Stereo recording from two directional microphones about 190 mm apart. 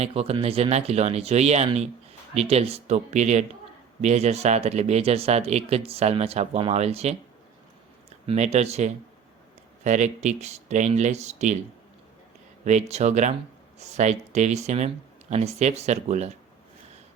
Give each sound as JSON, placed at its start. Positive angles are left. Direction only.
{"t": 0.0, "sound": "speech", "side_deg": -30}
{"t": 8.3, "sound": "speech", "side_deg": -35}
{"t": 12.6, "sound": "speech", "side_deg": -35}